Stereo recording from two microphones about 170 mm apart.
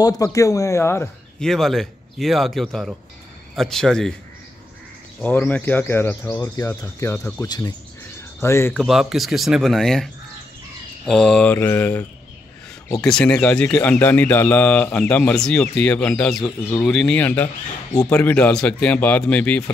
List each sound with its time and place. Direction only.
0.0 s speech: 20° left (ahead or behind)
1.4 s speech: centre (ahead or behind)
5.4 s speech: 10° left (ahead or behind)
8.7 s speech: centre (ahead or behind)
11.1 s speech: 5° left (ahead or behind)